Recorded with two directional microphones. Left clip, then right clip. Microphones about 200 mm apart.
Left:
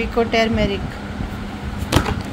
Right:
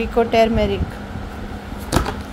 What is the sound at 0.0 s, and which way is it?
Speech, 15° right (ahead or behind).